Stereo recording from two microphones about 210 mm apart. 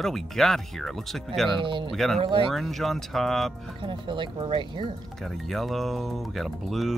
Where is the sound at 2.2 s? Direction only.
25° right (ahead or behind).